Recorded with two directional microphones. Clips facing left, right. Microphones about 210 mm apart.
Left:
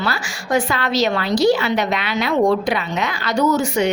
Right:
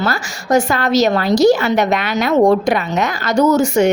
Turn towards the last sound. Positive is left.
turn(degrees=-45)  # may be behind; listen again after turning